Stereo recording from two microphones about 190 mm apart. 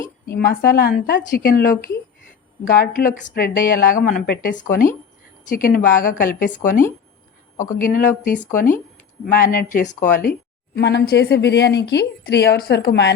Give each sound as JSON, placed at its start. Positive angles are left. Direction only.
{"t": 0.0, "sound": "a woman's voice", "side_deg": 50}
{"t": 7.8, "sound": "a woman's voice", "side_deg": 45}
{"t": 10.8, "sound": "speech", "side_deg": 60}